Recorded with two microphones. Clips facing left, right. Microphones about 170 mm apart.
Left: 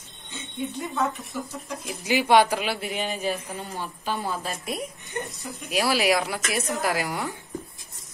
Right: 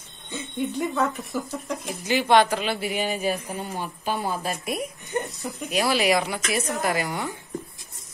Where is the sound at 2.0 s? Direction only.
10° left (ahead or behind).